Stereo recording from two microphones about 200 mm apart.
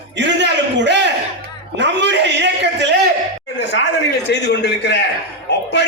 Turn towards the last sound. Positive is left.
turn(degrees=60)  # may be behind; listen again after turning